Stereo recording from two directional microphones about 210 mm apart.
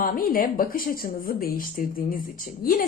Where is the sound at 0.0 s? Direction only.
45° left (ahead or behind).